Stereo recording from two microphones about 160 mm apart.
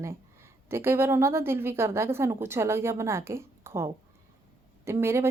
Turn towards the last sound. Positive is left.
turn(degrees=-15)  # may be behind; listen again after turning